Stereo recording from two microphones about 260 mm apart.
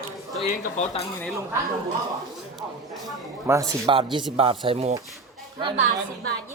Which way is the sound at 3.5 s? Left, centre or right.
Centre.